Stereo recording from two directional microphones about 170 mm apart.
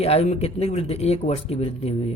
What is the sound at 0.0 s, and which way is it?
Speech, 35° left (ahead or behind).